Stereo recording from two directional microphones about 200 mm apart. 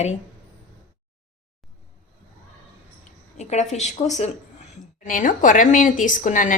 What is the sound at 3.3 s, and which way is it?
A woman's voice, 35° left (ahead or behind).